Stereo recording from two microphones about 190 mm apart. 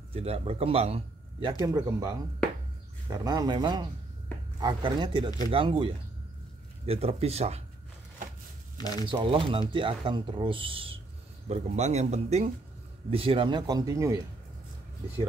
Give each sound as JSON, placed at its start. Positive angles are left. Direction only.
{"t": 0.1, "sound": "a man's voice", "side_deg": -30}
{"t": 8.7, "sound": "speech", "side_deg": 20}
{"t": 9.0, "sound": "a man's voice", "side_deg": -25}